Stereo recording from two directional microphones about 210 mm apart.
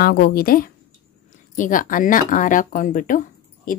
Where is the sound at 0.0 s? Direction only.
45° left (ahead or behind).